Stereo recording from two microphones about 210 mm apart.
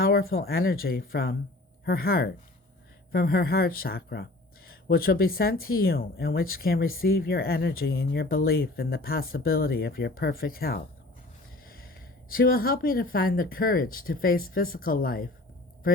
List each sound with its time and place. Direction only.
0.0 s speech: 45° left (ahead or behind)
12.3 s speech: 45° left (ahead or behind)